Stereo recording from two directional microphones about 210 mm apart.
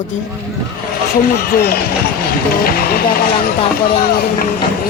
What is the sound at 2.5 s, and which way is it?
Speech, 45° left (ahead or behind).